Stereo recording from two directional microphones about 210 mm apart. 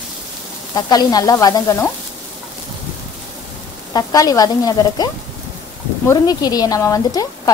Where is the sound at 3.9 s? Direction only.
15° left (ahead or behind).